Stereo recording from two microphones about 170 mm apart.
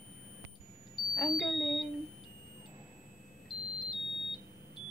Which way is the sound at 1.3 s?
Centre (ahead or behind).